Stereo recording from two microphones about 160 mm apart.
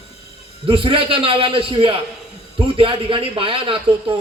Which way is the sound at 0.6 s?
35° right (ahead or behind).